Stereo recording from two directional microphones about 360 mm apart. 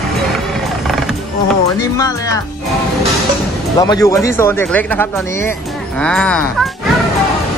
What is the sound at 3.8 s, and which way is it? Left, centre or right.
Speech, centre.